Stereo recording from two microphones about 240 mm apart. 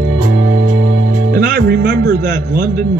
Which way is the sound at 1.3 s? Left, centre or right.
Right.